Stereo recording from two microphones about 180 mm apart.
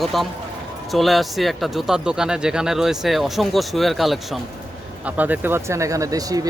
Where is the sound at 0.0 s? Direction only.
Centre (ahead or behind).